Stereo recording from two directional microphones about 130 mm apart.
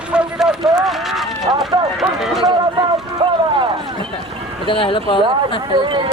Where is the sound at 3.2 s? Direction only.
40° right (ahead or behind).